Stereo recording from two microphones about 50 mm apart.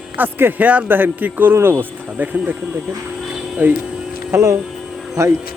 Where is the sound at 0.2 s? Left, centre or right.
Right.